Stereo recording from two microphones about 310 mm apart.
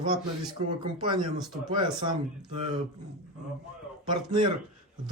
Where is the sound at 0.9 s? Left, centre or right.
Centre.